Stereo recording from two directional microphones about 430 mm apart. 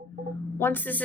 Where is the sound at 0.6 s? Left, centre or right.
Centre.